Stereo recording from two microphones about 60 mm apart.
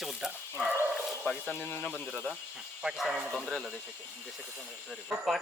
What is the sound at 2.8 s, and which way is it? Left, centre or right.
Speech, centre.